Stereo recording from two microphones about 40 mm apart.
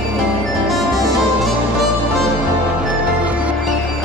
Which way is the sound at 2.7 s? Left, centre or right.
Right.